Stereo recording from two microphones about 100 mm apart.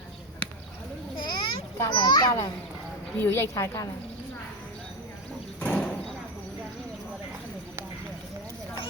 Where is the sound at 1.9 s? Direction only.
50° left (ahead or behind).